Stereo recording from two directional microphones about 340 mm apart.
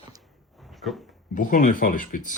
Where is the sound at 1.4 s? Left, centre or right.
Left.